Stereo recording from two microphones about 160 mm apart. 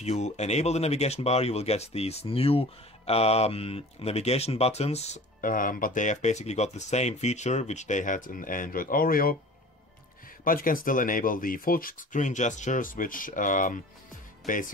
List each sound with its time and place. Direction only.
0.0 s speech: 45° left (ahead or behind); by 9.4 s 65° left (ahead or behind)
10.4 s speech: 60° left (ahead or behind)